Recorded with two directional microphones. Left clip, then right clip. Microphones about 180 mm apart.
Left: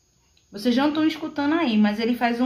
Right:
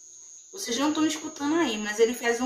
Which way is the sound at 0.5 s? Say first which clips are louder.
Left 5 dB; 45° left (ahead or behind).